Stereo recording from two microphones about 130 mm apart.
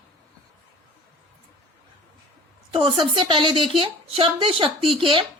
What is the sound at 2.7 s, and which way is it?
A woman's voice, 40° right (ahead or behind).